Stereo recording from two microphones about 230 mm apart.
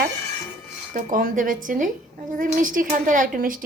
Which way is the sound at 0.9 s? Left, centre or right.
Right.